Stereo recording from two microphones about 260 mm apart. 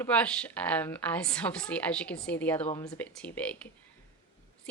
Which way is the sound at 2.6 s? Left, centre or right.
Centre.